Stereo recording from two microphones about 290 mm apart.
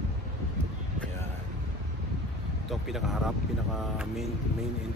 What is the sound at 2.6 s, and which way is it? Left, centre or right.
Speech, centre.